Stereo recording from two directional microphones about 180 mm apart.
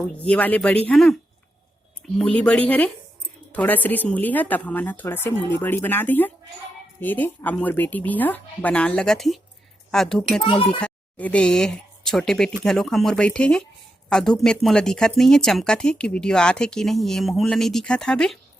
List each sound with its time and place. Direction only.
0.2 s speech: 10° left (ahead or behind)
2.1 s a woman's voice: 5° left (ahead or behind)